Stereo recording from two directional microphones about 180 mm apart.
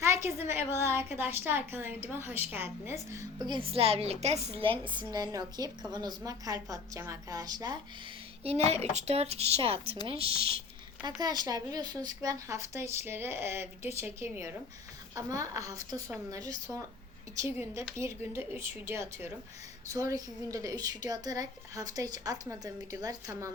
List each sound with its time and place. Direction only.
0.0 s a woman's voice: 15° right (ahead or behind)
8.4 s a woman's voice: 35° right (ahead or behind); by 23.5 s 20° right (ahead or behind)